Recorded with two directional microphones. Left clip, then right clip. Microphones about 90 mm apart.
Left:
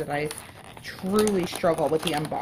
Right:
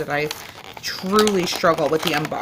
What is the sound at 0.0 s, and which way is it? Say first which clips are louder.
Speech: right 5 dB; 35° right (ahead or behind).